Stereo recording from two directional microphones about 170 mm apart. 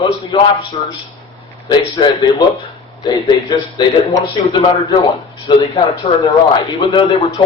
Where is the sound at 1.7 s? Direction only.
25° left (ahead or behind).